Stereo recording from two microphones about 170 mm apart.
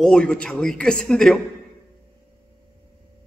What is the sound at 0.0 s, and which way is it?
A man's voice, 5° left (ahead or behind).